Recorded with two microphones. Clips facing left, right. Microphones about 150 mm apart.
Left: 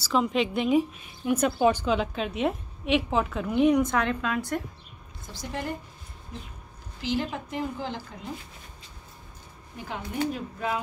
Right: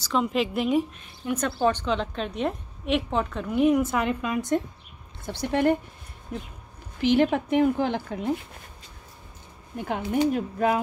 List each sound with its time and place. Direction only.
0.0 s a woman's voice: centre (ahead or behind)
1.2 s a woman's voice: 10° left (ahead or behind); by 4.6 s 15° right (ahead or behind)
5.2 s a woman's voice: 65° right (ahead or behind)
7.0 s a woman's voice: 60° right (ahead or behind)
9.8 s a woman's voice: 55° right (ahead or behind)